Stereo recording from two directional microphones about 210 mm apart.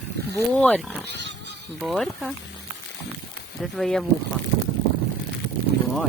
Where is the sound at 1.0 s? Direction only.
55° right (ahead or behind).